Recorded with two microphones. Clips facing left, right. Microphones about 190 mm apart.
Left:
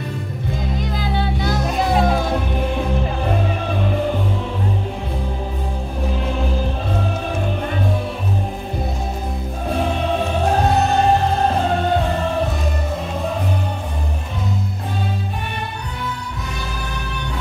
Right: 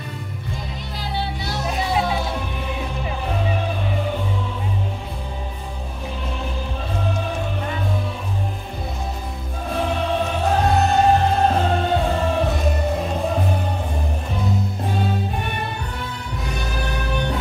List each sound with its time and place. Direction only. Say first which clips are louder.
0.9 s music: left 2 dB; 50° left (ahead or behind)